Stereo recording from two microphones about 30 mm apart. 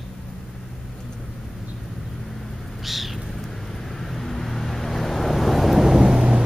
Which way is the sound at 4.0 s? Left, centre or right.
Centre.